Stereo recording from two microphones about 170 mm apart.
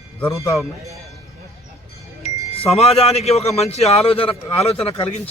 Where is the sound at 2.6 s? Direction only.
35° left (ahead or behind).